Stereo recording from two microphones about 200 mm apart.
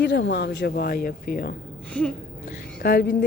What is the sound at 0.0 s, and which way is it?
Speech, 60° left (ahead or behind).